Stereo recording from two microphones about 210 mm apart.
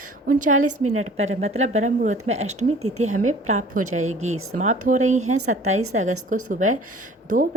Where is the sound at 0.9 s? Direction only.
30° right (ahead or behind).